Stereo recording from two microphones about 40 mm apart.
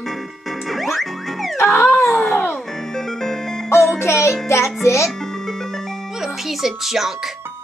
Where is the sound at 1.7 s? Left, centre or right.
Left.